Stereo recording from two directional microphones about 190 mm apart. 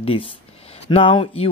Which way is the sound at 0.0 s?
30° left (ahead or behind).